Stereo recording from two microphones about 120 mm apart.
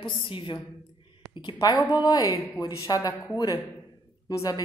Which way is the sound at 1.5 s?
35° left (ahead or behind).